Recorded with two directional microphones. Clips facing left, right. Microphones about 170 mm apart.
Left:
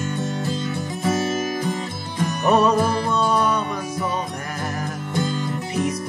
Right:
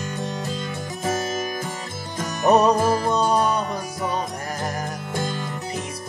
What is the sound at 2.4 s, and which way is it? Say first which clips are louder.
Music: right 1 dB; 40° right (ahead or behind).